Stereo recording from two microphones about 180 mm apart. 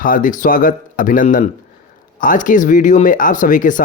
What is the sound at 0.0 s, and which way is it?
A man's voice, 50° left (ahead or behind).